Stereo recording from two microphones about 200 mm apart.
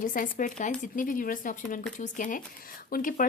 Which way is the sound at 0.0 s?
40° left (ahead or behind).